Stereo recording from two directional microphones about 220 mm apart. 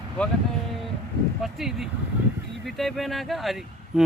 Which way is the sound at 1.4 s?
Centre (ahead or behind).